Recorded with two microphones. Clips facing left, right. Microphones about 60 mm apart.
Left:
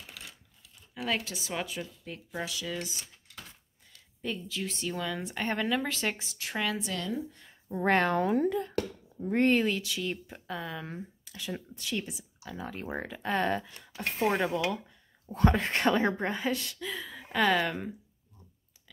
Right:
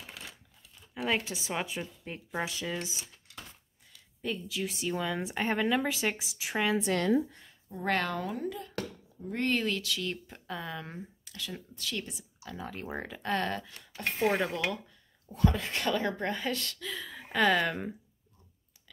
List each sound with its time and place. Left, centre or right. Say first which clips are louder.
1.0 s speech: right 1 dB; right
4.2 s speech: right 1 dB; centre
6.8 s speech: right 6 dB; right
7.7 s a woman's voice: left 5 dB; left
9.5 s speech: left 4 dB; centre
11.3 s speech: left 3 dB; left
15.3 s a woman's voice: left 3 dB; left
16.3 s speech: left 2 dB; centre